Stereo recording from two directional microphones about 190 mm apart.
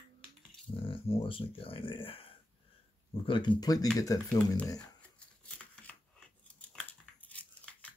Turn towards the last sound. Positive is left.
turn(degrees=5)  # may be behind; listen again after turning